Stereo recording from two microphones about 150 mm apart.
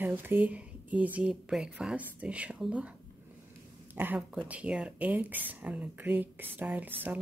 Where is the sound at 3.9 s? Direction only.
10° right (ahead or behind).